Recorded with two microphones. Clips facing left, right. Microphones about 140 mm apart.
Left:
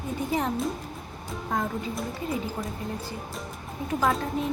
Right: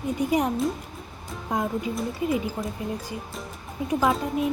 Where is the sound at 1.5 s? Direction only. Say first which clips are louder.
Right 2 dB; 15° right (ahead or behind).